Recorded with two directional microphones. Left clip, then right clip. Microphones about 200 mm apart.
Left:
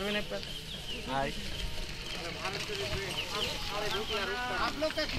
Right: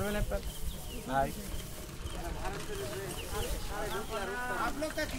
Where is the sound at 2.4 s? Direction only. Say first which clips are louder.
Left 4 dB; 55° right (ahead or behind).